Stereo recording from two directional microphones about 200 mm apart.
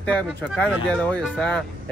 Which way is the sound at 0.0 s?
5° left (ahead or behind).